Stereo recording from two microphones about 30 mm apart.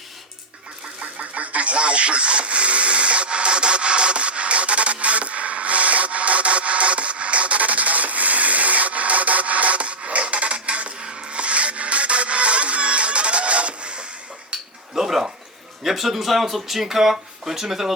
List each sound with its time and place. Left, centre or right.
1.0 s radio: right
14.5 s a sound: right
15.8 s speech: centre